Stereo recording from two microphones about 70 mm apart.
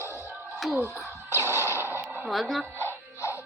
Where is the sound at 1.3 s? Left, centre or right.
Right.